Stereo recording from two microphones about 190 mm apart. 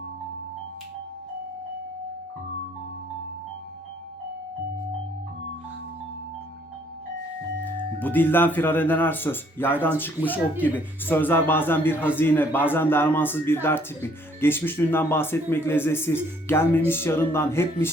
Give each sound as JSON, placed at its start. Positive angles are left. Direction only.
{"t": 7.6, "sound": "a man's voice", "side_deg": 10}